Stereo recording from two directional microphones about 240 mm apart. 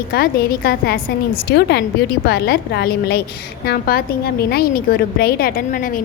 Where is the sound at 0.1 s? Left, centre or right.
Left.